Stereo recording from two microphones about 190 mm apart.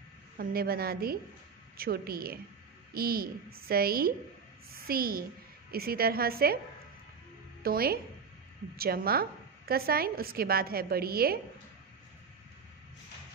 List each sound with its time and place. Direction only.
0.4 s a woman's voice: 50° right (ahead or behind)
7.6 s a woman's voice: 50° right (ahead or behind)